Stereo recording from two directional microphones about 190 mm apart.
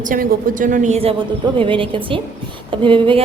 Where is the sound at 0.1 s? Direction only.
50° right (ahead or behind).